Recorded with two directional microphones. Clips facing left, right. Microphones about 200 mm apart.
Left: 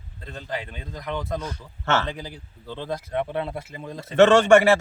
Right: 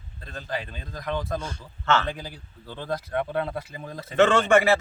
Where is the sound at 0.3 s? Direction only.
20° left (ahead or behind).